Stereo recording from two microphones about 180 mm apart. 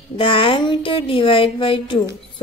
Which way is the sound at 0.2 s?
30° left (ahead or behind).